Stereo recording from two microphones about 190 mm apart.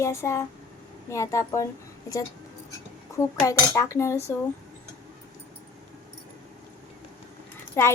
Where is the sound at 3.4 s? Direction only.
15° left (ahead or behind).